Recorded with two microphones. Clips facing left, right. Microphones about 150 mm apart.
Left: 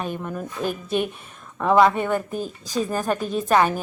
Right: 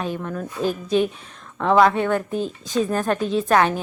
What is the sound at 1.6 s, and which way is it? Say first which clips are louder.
A woman's voice: right 1 dB; 10° left (ahead or behind).